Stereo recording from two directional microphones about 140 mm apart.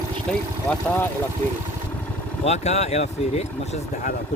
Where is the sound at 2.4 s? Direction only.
50° left (ahead or behind).